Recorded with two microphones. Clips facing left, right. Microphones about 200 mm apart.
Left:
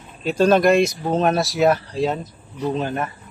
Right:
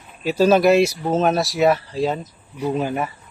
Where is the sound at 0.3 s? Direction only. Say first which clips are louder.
Right 1 dB; 5° right (ahead or behind).